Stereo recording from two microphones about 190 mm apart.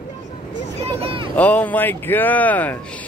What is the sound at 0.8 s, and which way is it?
Vehicle, 30° right (ahead or behind).